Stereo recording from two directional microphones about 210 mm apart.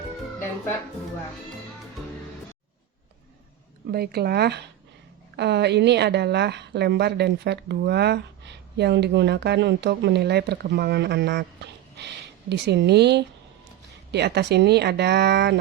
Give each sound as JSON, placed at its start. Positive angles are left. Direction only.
{"t": 3.9, "sound": "a woman's voice", "side_deg": -50}